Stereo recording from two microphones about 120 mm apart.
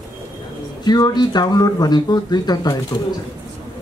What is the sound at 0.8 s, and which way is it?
Speech, 35° left (ahead or behind).